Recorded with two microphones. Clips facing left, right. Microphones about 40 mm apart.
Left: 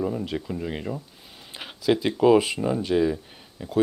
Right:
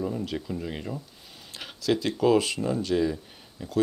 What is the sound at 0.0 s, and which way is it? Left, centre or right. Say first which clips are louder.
Speech: left 3 dB; centre.